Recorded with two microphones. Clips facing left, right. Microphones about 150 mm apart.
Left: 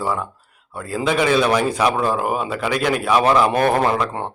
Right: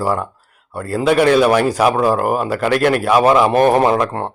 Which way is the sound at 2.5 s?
55° right (ahead or behind).